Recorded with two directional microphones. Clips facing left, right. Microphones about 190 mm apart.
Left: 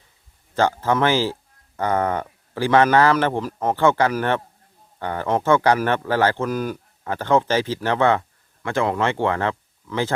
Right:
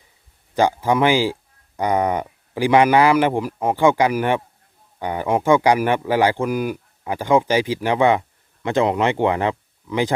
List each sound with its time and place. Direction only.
0.5 s speech: 15° right (ahead or behind)